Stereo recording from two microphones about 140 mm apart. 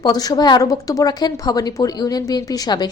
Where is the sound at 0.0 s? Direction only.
30° left (ahead or behind).